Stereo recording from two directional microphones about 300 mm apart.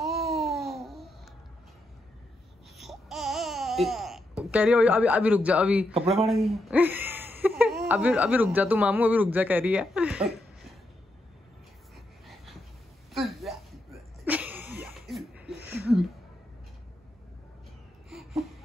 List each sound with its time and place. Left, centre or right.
0.0 s babbling: centre
2.8 s baby cry: centre
5.9 s speech: centre
6.2 s speech: centre
13.1 s a sound: centre